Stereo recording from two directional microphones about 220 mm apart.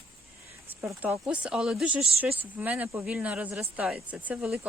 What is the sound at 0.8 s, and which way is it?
Speech, 10° right (ahead or behind).